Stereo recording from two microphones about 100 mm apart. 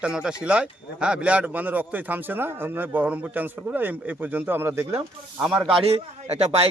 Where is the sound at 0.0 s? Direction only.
10° right (ahead or behind); by 4.9 s 25° right (ahead or behind).